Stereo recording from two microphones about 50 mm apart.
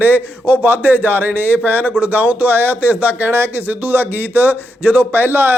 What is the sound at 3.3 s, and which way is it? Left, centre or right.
Speech, right.